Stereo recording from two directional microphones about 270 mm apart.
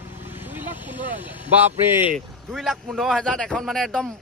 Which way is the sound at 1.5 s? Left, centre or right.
Centre.